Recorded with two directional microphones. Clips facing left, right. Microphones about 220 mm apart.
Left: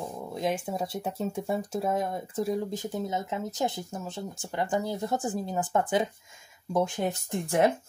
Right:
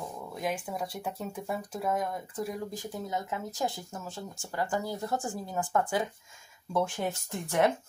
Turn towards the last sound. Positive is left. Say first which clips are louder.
# left 3 dB
turn(degrees=30)  # may be behind; listen again after turning